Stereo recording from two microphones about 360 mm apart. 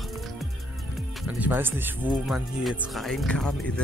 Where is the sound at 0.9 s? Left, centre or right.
Centre.